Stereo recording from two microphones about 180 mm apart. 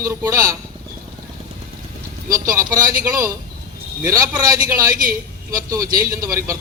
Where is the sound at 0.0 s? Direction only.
20° right (ahead or behind).